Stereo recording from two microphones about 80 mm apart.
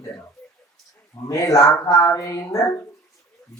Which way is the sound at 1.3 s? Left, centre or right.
Left.